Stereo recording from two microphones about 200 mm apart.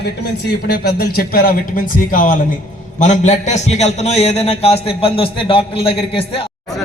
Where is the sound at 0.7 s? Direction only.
50° left (ahead or behind); by 6.4 s 30° left (ahead or behind).